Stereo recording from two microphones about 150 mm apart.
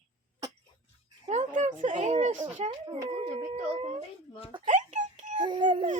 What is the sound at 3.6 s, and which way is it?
Speech, 35° right (ahead or behind).